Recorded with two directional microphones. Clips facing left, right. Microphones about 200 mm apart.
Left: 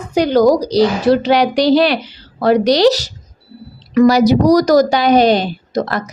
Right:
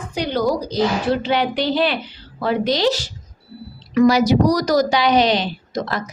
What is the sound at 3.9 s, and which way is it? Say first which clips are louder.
A woman's voice: left 4 dB; 40° left (ahead or behind).